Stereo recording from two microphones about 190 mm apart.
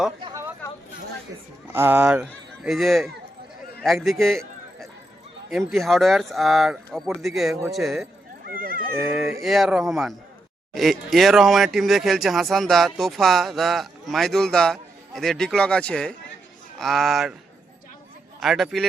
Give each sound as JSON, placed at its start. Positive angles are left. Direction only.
{"t": 0.2, "sound": "a sound", "side_deg": -25}
{"t": 1.7, "sound": "speech", "side_deg": -10}
{"t": 5.5, "sound": "speech", "side_deg": 0}
{"t": 8.4, "sound": "speech", "side_deg": -50}
{"t": 9.0, "sound": "speech", "side_deg": 0}
{"t": 18.3, "sound": "speech", "side_deg": 0}